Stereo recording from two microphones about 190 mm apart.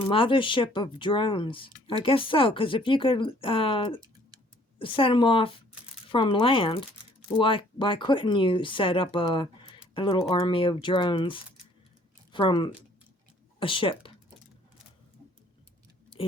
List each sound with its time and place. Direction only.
0.1 s speech: 25° left (ahead or behind)